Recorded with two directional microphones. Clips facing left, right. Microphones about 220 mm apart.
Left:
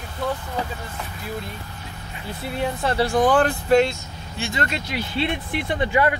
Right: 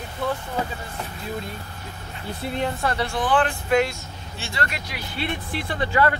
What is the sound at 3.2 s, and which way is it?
Speech, 45° left (ahead or behind).